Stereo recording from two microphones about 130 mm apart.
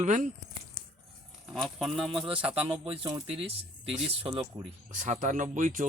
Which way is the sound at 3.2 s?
50° right (ahead or behind).